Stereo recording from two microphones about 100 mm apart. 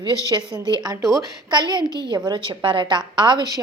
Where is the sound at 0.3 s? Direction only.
45° right (ahead or behind).